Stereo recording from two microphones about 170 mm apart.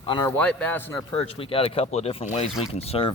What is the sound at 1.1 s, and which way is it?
Speech, 35° left (ahead or behind).